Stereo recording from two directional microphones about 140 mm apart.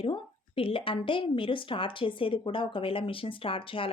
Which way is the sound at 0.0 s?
40° left (ahead or behind).